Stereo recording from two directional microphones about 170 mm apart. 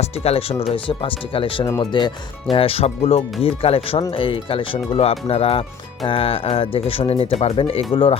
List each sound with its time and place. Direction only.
0.0 s speech: 35° left (ahead or behind)